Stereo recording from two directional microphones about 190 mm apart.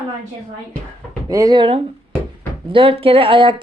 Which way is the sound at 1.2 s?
20° right (ahead or behind).